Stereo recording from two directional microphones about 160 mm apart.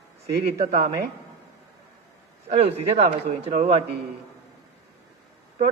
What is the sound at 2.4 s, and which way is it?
A man's voice, 40° right (ahead or behind).